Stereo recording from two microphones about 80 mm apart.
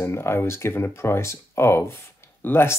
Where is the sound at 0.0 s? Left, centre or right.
Left.